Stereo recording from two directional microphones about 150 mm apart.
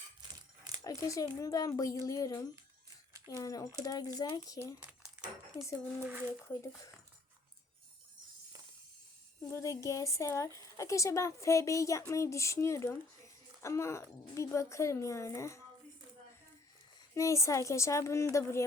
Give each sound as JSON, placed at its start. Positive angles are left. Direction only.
{"t": 0.9, "sound": "a woman's voice", "side_deg": 20}
{"t": 4.9, "sound": "a sound", "side_deg": -5}
{"t": 6.5, "sound": "a woman's voice", "side_deg": 20}
{"t": 9.5, "sound": "a woman's voice", "side_deg": 20}
{"t": 17.2, "sound": "a woman's voice", "side_deg": 20}